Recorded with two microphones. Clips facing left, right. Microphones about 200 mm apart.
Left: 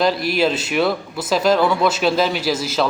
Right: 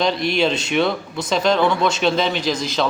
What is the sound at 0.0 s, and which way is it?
Speech, 5° left (ahead or behind).